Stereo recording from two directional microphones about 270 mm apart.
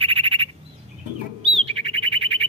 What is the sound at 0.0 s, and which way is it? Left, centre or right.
Bird, centre.